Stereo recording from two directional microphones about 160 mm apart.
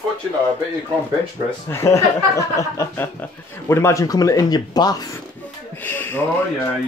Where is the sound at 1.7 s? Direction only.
15° left (ahead or behind).